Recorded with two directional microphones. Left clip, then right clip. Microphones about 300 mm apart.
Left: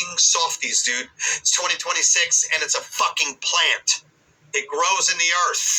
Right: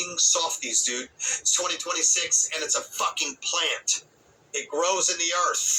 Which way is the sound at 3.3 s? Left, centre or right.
Left.